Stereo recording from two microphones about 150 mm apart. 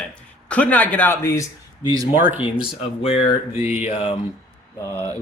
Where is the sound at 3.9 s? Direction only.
40° left (ahead or behind).